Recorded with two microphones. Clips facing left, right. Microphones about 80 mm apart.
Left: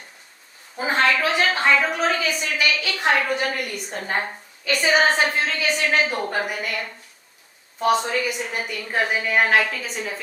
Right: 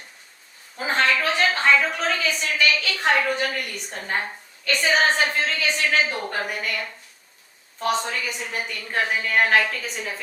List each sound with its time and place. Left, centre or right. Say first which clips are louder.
0.8 s a woman's voice: left 2 dB; centre
4.6 s a woman's voice: left 2 dB; centre